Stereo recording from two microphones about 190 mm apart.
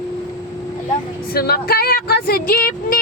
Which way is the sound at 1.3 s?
55° left (ahead or behind).